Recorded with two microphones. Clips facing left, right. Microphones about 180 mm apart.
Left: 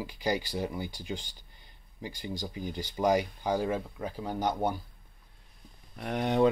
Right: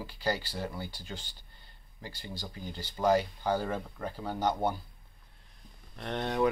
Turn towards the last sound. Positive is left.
turn(degrees=10)  # may be behind; listen again after turning